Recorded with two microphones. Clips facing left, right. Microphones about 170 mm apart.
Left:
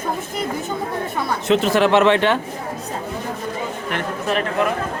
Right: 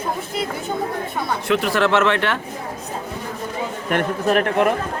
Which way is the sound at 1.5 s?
20° left (ahead or behind).